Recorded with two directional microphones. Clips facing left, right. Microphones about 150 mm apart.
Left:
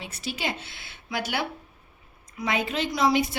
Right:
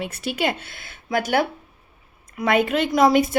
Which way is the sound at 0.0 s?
55° right (ahead or behind).